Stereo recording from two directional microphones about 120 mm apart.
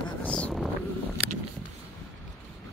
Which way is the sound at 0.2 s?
10° left (ahead or behind).